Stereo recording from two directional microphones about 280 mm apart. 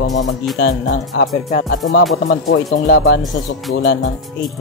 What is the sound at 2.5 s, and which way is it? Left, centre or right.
Speech, left.